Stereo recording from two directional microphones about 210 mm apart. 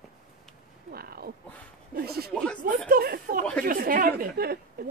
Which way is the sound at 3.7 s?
40° right (ahead or behind).